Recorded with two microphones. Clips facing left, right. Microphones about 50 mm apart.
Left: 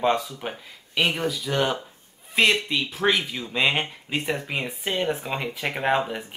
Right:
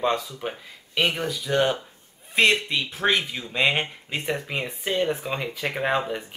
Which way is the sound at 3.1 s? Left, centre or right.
Centre.